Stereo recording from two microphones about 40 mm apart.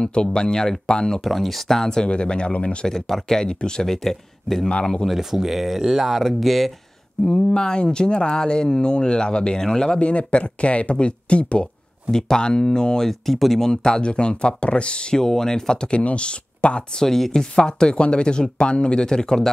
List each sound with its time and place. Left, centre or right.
0.0 s speech: left
1.2 s speech: centre; by 2.9 s left
2.9 s speech: centre
5.0 s speech: centre
7.2 s speech: centre
9.9 s speech: left
12.1 s speech: centre
16.0 s speech: left
17.0 s speech: centre